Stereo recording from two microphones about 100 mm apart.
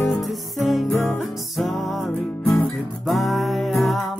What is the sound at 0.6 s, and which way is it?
Music, centre (ahead or behind).